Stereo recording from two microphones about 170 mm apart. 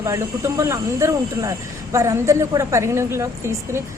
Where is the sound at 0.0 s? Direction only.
20° right (ahead or behind).